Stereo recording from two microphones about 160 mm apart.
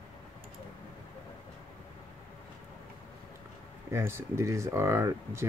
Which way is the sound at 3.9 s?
15° right (ahead or behind).